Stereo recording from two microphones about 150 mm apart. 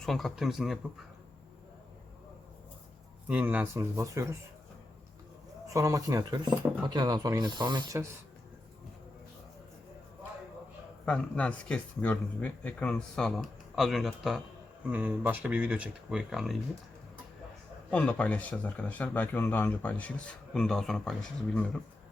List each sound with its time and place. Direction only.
0.0 s speech: centre (ahead or behind)
3.2 s speech: 10° right (ahead or behind)
5.6 s speech: 20° right (ahead or behind)
11.0 s speech: 5° left (ahead or behind)
14.8 s speech: 10° right (ahead or behind)
17.9 s speech: 10° left (ahead or behind)